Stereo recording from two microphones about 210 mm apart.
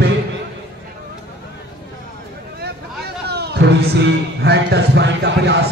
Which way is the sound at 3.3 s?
50° right (ahead or behind).